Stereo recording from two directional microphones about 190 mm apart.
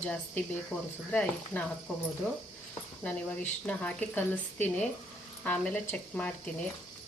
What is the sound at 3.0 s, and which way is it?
Speech, 5° left (ahead or behind).